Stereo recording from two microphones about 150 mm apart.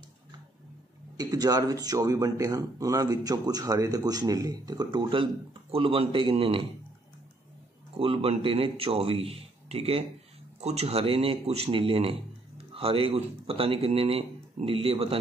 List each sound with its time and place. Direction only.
1.1 s speech: 25° right (ahead or behind)
8.0 s speech: 40° right (ahead or behind)